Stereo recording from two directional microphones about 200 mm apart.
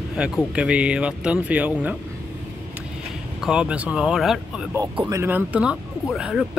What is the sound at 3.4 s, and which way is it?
Speech, 5° right (ahead or behind).